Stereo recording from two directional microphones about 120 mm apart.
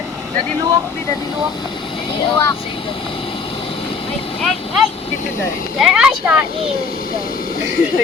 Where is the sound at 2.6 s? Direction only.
50° left (ahead or behind).